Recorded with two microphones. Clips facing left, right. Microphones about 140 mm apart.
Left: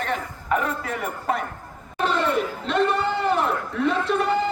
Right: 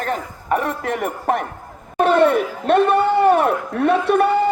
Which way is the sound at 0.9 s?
50° right (ahead or behind).